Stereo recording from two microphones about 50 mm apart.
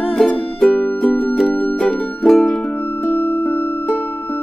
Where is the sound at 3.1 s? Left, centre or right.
Left.